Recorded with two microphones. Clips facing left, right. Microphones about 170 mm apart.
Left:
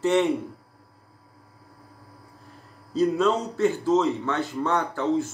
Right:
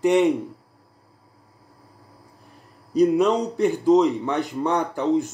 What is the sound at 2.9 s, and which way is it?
Speech, 15° right (ahead or behind).